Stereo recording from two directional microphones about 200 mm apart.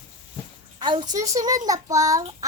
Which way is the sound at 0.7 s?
25° right (ahead or behind).